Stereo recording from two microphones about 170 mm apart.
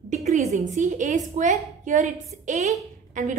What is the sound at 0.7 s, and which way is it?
A woman's voice, 45° right (ahead or behind).